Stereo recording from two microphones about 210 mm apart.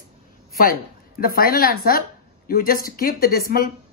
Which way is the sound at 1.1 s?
45° left (ahead or behind).